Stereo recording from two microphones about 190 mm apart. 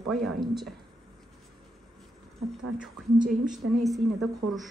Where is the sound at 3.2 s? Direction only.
45° right (ahead or behind).